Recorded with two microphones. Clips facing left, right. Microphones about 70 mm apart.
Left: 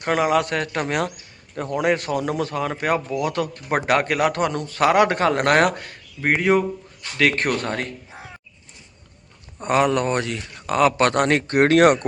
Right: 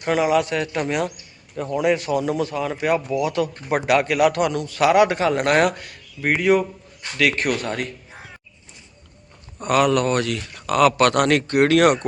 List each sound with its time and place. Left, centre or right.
0.0 s speech: left
9.6 s speech: left